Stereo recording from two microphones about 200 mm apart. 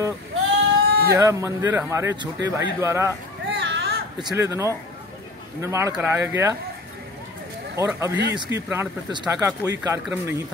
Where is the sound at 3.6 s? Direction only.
60° right (ahead or behind).